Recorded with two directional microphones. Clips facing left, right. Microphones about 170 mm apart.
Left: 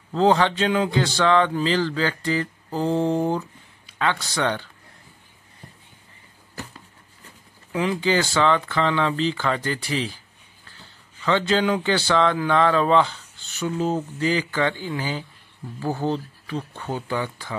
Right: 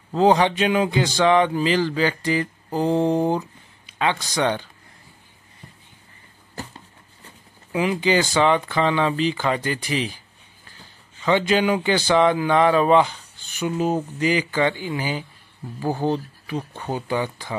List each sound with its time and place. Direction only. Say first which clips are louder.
0.1 s speech: right 2 dB; 15° right (ahead or behind)
7.7 s speech: right 2 dB; 15° right (ahead or behind)
11.2 s speech: right 2 dB; 15° right (ahead or behind)